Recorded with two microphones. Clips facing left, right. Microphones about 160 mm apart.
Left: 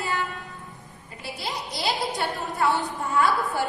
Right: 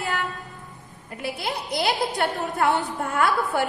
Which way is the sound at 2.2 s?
70° right (ahead or behind).